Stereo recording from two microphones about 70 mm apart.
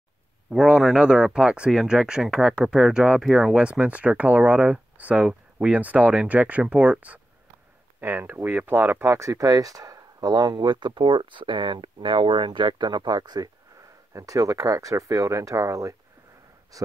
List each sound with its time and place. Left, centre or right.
0.5 s speech: centre
8.0 s speech: right
12.4 s speech: right
14.1 s speech: right